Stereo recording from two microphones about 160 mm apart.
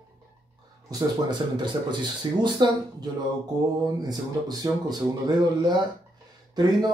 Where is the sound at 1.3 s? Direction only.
30° right (ahead or behind).